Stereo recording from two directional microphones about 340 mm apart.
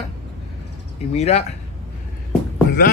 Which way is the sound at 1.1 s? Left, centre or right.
Centre.